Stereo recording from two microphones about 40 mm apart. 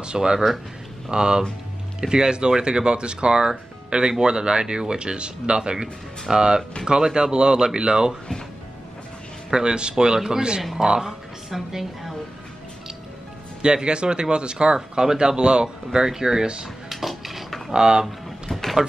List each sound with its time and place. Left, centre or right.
0.0 s speech: right
9.5 s speech: centre
11.5 s a woman's voice: centre
13.6 s speech: right
16.9 s dishes: centre
17.7 s speech: centre
18.0 s vehicle: centre